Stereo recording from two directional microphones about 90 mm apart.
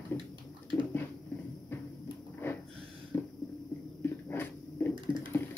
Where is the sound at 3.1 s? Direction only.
25° left (ahead or behind).